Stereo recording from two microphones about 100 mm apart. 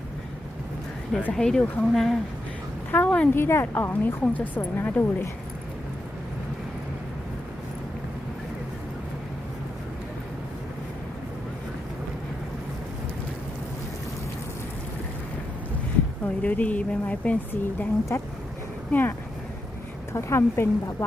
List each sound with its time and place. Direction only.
1.3 s a woman's voice: 5° left (ahead or behind)
16.2 s a woman's voice: 15° left (ahead or behind)
20.1 s a woman's voice: 25° left (ahead or behind)